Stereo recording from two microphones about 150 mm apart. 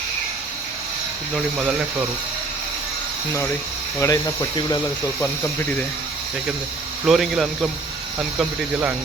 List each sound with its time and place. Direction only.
1.5 s speech: 5° right (ahead or behind)
4.0 s speech: 25° left (ahead or behind)
7.0 s speech: centre (ahead or behind)